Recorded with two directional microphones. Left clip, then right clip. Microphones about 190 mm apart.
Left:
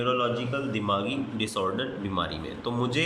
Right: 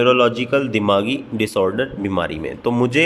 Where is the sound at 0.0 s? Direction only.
55° right (ahead or behind).